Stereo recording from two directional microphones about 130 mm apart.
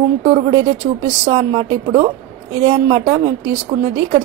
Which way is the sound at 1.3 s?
45° right (ahead or behind).